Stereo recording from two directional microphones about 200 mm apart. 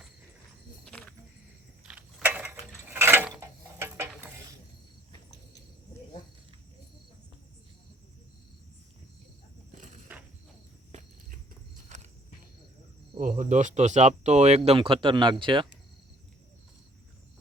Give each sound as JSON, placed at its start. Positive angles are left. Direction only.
{"t": 0.9, "sound": "cricket", "side_deg": 5}
{"t": 1.8, "sound": "mechanisms", "side_deg": -5}
{"t": 11.9, "sound": "walk", "side_deg": -35}
{"t": 13.1, "sound": "speech", "side_deg": -40}